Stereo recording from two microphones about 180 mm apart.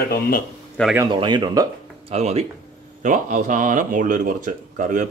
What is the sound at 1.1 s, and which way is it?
Speech, 25° right (ahead or behind).